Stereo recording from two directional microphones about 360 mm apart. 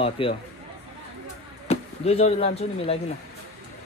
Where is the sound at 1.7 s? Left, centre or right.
Centre.